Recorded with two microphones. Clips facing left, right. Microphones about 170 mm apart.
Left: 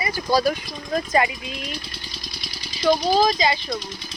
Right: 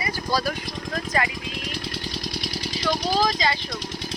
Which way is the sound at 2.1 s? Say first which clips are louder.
Right 8 dB; 75° right (ahead or behind).